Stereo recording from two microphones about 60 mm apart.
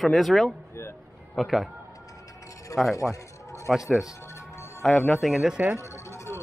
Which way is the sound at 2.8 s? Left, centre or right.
Centre.